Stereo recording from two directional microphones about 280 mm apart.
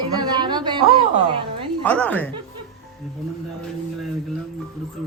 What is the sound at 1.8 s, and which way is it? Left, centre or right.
Speech, centre.